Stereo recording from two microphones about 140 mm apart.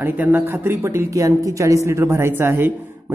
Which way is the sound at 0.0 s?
10° right (ahead or behind).